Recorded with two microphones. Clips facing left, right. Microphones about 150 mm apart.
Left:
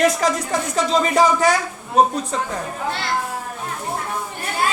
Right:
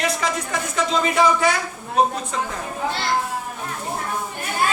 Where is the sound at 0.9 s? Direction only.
40° left (ahead or behind).